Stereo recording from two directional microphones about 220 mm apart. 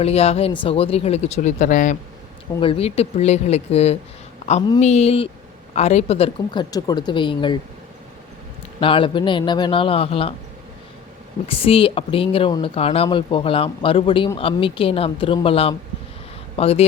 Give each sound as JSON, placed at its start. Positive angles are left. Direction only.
{"t": 0.0, "sound": "speech", "side_deg": 30}
{"t": 8.8, "sound": "speech", "side_deg": 25}
{"t": 11.4, "sound": "speech", "side_deg": 25}